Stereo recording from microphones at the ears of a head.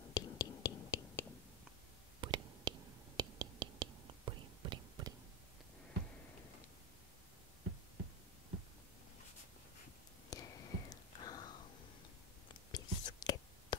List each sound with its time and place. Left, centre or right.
0.0 s whispering: left
2.1 s whispering: right
10.3 s whispering: left
12.7 s whispering: left